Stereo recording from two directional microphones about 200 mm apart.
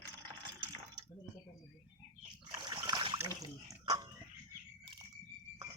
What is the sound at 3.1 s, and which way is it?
Water, 15° right (ahead or behind).